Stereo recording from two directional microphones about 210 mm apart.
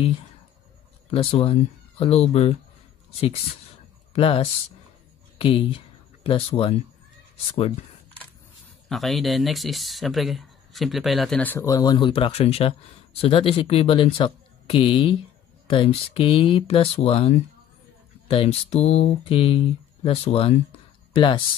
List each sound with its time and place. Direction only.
1.1 s speech: 25° left (ahead or behind)
4.1 s speech: 30° left (ahead or behind)
5.4 s speech: 25° left (ahead or behind)
8.8 s speech: centre (ahead or behind); by 21.4 s 25° left (ahead or behind)